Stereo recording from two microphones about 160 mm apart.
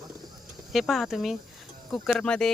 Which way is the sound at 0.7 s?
Centre (ahead or behind).